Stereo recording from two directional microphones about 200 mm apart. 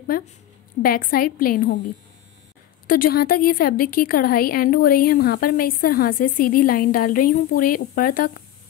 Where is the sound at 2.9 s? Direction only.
45° left (ahead or behind).